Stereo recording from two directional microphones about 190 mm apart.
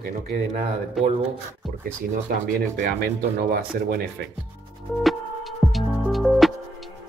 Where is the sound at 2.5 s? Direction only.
55° right (ahead or behind).